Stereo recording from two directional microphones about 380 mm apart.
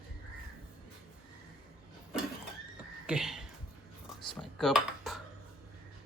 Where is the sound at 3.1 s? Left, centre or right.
Centre.